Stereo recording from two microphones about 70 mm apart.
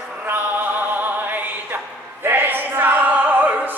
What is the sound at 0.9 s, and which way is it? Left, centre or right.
Music, right.